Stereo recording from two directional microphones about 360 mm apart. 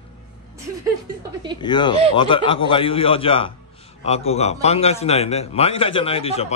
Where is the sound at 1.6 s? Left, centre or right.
Centre.